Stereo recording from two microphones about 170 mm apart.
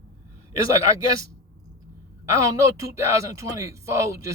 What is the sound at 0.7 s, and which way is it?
Speech, 20° right (ahead or behind).